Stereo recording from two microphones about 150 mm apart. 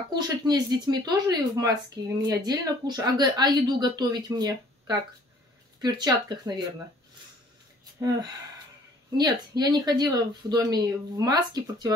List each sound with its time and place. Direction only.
0.1 s speech: 25° right (ahead or behind)
8.0 s speech: 20° right (ahead or behind)